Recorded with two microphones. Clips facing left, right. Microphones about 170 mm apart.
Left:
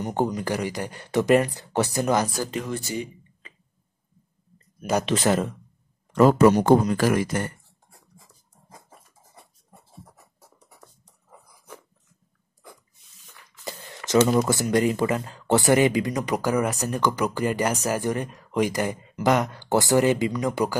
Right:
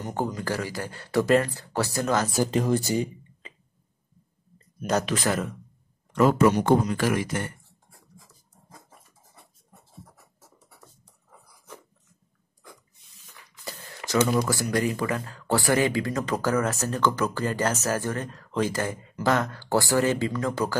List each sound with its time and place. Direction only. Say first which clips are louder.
0.0 s speech: left 4 dB; 20° left (ahead or behind)
2.3 s speech: right 5 dB; 20° right (ahead or behind)
2.6 s speech: right 6 dB; 40° right (ahead or behind)
5.0 s speech: left 4 dB; 25° left (ahead or behind)
6.1 s speech: left 4 dB; 35° left (ahead or behind)
14.2 s speech: left 3 dB; 20° left (ahead or behind)